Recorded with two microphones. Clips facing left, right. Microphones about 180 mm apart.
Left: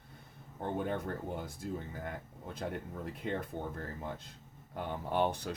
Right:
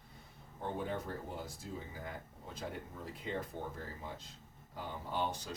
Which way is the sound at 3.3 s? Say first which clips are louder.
Left 3 dB; 60° left (ahead or behind).